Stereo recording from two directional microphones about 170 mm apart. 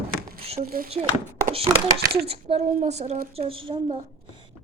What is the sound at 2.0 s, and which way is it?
Speech, 65° right (ahead or behind).